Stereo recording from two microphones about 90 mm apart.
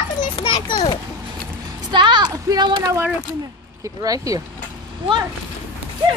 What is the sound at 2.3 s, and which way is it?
Speech, 45° right (ahead or behind).